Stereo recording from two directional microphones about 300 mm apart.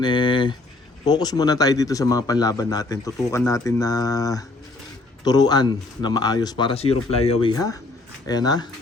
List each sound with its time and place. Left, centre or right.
0.0 s speech: centre